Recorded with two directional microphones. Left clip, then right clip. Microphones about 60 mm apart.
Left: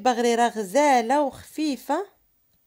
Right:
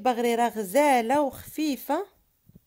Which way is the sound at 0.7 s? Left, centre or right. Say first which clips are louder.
Left 2 dB; centre.